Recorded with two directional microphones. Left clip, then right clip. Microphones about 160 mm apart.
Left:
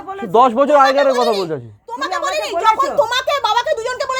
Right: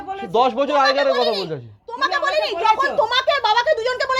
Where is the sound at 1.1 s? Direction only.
30° left (ahead or behind).